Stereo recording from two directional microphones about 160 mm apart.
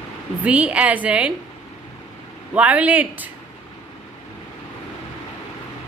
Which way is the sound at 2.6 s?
10° right (ahead or behind).